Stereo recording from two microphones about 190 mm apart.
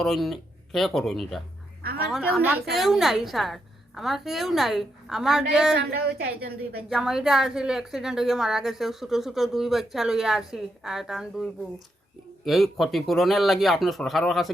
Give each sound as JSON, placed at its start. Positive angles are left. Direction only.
{"t": 0.0, "sound": "a woman's voice", "side_deg": 0}
{"t": 5.7, "sound": "speech", "side_deg": -55}
{"t": 6.8, "sound": "a woman's voice", "side_deg": 0}
{"t": 12.5, "sound": "a woman's voice", "side_deg": 0}